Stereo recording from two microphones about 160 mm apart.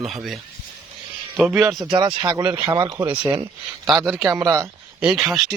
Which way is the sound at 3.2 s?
25° right (ahead or behind).